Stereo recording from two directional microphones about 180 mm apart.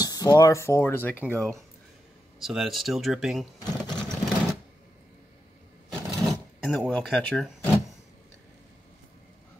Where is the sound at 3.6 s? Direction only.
25° left (ahead or behind).